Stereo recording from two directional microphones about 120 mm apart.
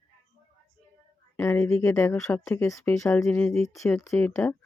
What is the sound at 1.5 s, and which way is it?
Speech, 25° left (ahead or behind).